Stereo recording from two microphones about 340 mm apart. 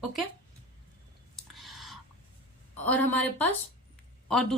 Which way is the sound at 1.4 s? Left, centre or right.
Centre.